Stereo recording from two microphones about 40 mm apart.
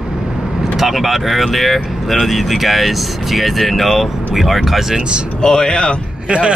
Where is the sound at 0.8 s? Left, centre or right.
Centre.